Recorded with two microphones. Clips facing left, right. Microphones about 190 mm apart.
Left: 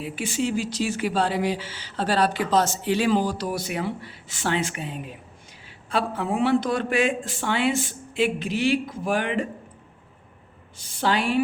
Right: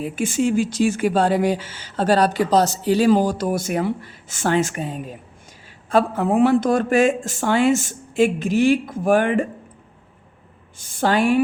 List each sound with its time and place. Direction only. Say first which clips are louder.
0.0 s speech: right 6 dB; 50° right (ahead or behind)
10.8 s speech: right 5 dB; 50° right (ahead or behind)